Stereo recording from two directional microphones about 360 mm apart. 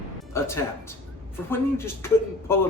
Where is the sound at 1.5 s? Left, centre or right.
Centre.